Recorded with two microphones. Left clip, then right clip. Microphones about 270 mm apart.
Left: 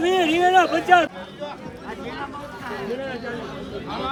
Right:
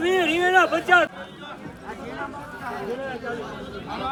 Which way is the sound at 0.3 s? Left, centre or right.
Left.